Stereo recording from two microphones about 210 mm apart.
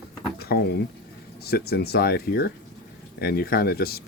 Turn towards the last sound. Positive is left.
turn(degrees=45)  # may be behind; listen again after turning